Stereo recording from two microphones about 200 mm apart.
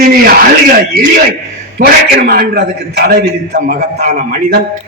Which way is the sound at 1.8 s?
45° right (ahead or behind).